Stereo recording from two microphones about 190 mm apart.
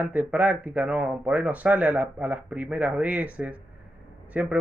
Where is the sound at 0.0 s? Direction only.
10° right (ahead or behind).